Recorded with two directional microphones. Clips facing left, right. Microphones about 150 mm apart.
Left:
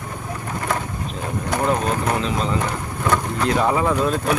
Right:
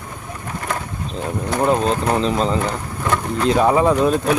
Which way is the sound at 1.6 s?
30° right (ahead or behind).